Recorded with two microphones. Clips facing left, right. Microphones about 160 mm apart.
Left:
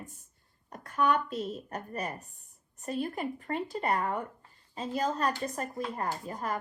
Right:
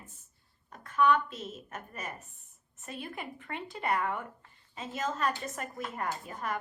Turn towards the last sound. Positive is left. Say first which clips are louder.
# left 2 dB
turn(degrees=35)  # may be behind; listen again after turning